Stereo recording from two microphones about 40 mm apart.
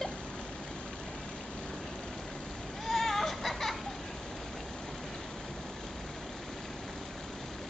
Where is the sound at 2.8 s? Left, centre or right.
Centre.